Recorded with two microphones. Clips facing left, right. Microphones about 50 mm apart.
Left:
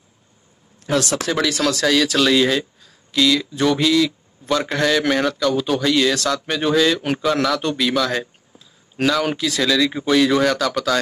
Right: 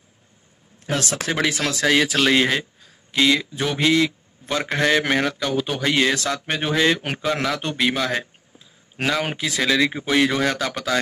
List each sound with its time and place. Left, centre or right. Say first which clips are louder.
1.1 s a man's voice: left 2 dB; right
3.5 s speech: left 6 dB; centre
3.8 s a man's voice: left 1 dB; right